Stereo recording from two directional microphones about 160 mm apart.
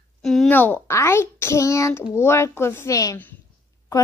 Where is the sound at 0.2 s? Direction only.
Centre (ahead or behind).